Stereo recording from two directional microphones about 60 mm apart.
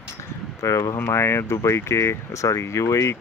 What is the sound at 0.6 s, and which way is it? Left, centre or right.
Speech, left.